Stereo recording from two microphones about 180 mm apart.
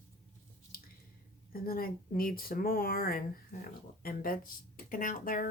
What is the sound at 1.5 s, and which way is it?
Speech, 55° left (ahead or behind).